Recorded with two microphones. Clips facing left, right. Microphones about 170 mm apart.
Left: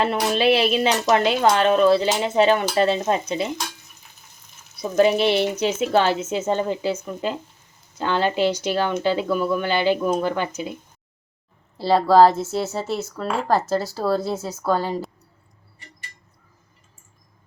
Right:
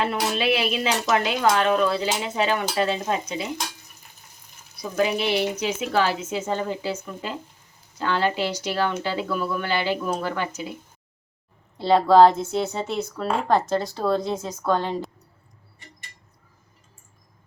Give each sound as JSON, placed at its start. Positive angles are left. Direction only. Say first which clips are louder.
{"t": 0.0, "sound": "speech", "louder": "left 4 dB", "side_deg": 35}
{"t": 4.8, "sound": "speech", "louder": "left 6 dB", "side_deg": 30}
{"t": 11.8, "sound": "speech", "louder": "even", "side_deg": 0}